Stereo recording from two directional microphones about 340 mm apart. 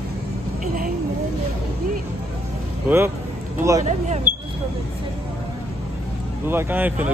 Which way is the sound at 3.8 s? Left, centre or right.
Right.